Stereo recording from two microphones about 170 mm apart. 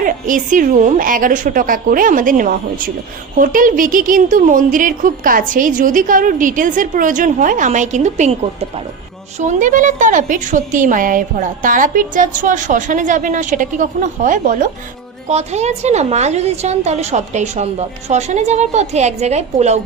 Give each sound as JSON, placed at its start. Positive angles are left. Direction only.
{"t": 0.0, "sound": "a woman's voice", "side_deg": -50}
{"t": 9.4, "sound": "a woman's voice", "side_deg": -45}
{"t": 15.3, "sound": "a woman's voice", "side_deg": -40}